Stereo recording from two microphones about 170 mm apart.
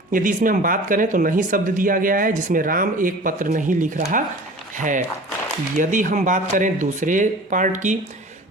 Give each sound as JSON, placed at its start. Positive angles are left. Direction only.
{"t": 0.1, "sound": "speech", "side_deg": -50}